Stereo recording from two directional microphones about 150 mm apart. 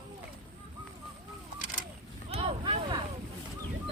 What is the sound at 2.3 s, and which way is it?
Vehicle, 40° right (ahead or behind).